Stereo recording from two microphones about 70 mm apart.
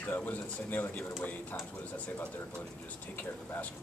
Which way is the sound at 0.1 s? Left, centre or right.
Left.